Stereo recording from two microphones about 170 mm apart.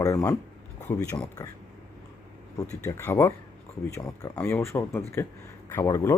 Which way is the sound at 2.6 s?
15° left (ahead or behind).